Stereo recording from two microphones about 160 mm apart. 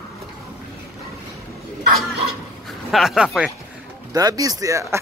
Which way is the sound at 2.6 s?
Centre (ahead or behind).